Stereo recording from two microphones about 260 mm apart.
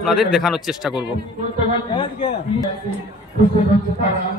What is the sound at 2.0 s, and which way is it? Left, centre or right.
Speech, left.